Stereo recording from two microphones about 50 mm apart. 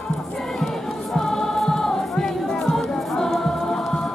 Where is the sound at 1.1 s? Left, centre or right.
Centre.